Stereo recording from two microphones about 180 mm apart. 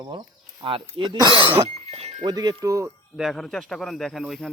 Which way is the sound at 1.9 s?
35° right (ahead or behind).